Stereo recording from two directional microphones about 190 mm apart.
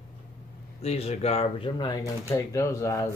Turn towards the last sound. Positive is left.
turn(degrees=15)  # may be behind; listen again after turning